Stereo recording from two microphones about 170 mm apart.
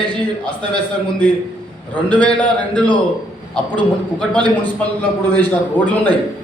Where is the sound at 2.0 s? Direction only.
10° left (ahead or behind).